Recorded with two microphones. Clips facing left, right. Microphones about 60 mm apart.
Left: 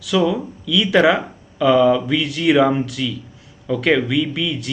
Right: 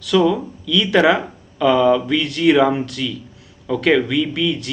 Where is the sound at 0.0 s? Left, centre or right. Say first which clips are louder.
Right 2 dB; centre.